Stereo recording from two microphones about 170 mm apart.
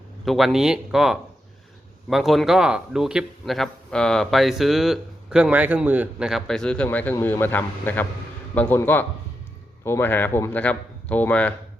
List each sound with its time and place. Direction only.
0.3 s a man's voice: centre (ahead or behind)